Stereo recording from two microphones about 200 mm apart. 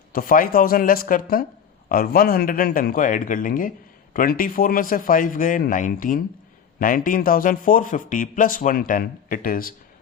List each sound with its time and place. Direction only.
0.1 s speech: 45° left (ahead or behind)